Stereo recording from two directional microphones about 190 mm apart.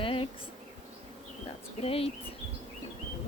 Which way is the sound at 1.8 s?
30° left (ahead or behind).